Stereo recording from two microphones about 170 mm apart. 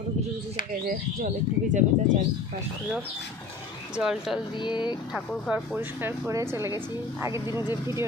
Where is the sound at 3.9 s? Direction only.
5° right (ahead or behind).